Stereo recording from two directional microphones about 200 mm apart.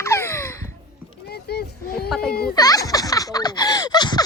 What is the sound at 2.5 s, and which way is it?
Baby laughter, 20° left (ahead or behind).